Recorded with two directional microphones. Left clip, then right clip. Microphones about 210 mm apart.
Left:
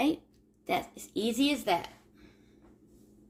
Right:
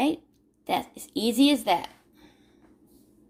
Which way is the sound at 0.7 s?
35° right (ahead or behind).